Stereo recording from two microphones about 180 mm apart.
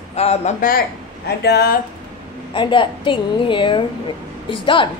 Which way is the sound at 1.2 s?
65° left (ahead or behind).